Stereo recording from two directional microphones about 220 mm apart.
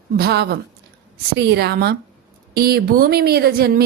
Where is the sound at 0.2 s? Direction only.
45° right (ahead or behind).